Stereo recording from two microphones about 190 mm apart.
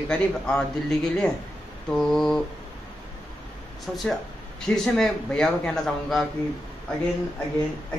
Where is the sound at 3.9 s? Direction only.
5° left (ahead or behind).